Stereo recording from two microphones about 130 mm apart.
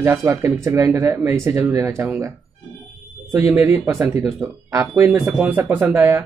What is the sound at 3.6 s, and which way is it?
Speech, 15° right (ahead or behind).